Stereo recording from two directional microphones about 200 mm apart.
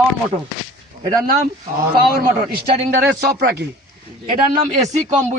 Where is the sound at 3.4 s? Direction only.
55° right (ahead or behind).